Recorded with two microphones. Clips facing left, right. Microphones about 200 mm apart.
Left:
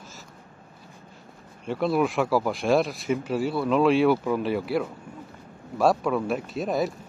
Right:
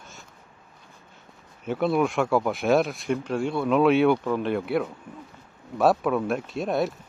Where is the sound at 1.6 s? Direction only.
Centre (ahead or behind).